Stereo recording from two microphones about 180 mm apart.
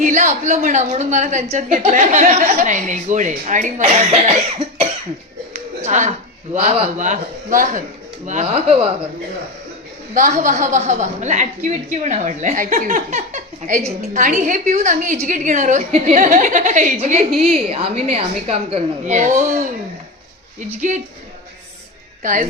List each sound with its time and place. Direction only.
0.0 s a woman's voice: 45° right (ahead or behind)
5.5 s a woman's voice: 40° right (ahead or behind)
10.2 s a woman's voice: 40° right (ahead or behind)
22.2 s a woman's voice: 45° right (ahead or behind)